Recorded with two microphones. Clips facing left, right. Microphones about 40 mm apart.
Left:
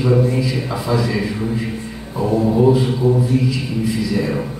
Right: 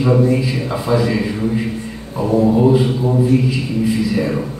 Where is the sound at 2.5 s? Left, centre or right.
Centre.